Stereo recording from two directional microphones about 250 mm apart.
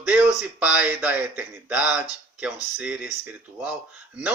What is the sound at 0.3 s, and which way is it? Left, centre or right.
Speech, centre.